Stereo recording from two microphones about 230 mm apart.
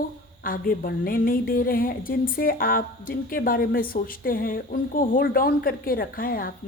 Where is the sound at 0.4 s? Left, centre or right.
Left.